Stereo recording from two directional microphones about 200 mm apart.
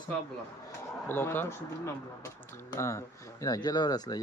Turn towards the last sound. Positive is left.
turn(degrees=20)  # may be behind; listen again after turning